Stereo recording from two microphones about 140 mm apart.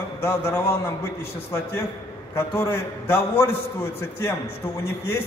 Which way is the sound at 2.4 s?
20° left (ahead or behind).